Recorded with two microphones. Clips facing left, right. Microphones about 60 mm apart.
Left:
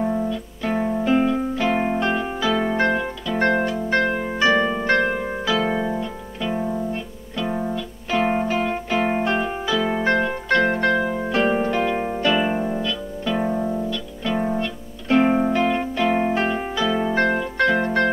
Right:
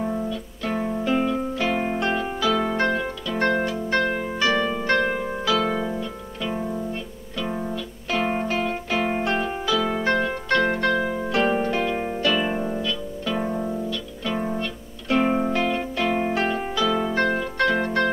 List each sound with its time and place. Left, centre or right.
0.0 s music: centre
3.4 s harp: left
9.2 s music: centre
11.0 s harp: centre
12.2 s music: centre